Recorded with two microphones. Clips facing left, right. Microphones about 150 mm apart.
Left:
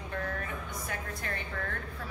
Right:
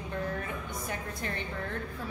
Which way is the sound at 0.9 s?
25° right (ahead or behind).